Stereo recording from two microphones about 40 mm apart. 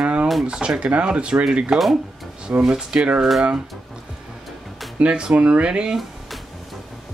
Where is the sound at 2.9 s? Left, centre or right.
Right.